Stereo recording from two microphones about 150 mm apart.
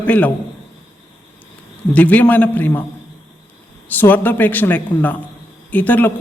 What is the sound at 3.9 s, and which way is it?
Speech, 10° left (ahead or behind).